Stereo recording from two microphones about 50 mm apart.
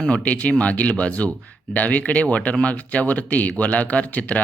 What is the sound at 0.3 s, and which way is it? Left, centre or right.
Speech, left.